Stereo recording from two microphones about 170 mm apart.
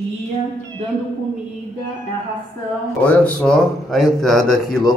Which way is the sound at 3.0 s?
10° left (ahead or behind).